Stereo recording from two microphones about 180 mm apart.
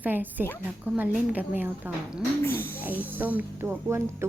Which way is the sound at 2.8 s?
10° right (ahead or behind).